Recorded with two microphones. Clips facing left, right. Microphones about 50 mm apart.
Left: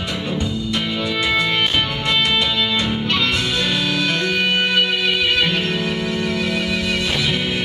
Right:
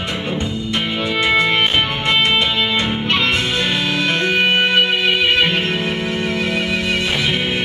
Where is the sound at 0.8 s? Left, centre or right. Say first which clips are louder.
Right 3 dB; right.